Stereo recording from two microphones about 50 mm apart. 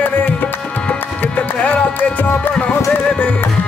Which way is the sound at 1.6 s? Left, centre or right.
Left.